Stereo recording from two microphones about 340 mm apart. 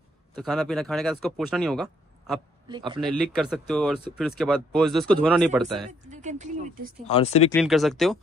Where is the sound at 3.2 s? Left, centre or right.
Centre.